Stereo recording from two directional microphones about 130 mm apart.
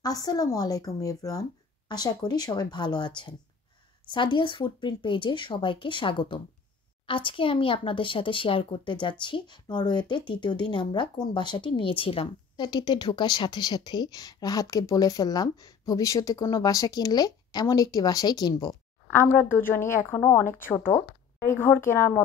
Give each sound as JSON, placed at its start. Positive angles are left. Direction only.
{"t": 0.0, "sound": "a woman's voice", "side_deg": 30}
{"t": 19.1, "sound": "speech", "side_deg": 15}